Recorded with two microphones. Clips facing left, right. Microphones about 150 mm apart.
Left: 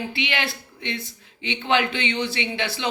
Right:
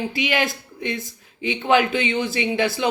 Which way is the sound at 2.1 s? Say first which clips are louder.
Right 4 dB; 45° right (ahead or behind).